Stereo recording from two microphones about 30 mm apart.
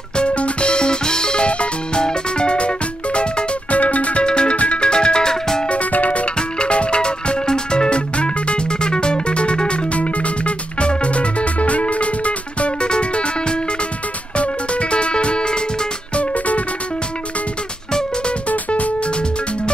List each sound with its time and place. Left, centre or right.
0.2 s music: left
4.2 s music: left
5.7 s music: left
6.6 s music: left
16.2 s music: left
18.7 s music: left